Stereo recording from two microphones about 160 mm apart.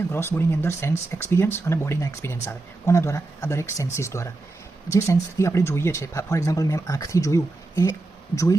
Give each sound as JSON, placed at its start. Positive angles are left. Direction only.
{"t": 0.1, "sound": "speech", "side_deg": 15}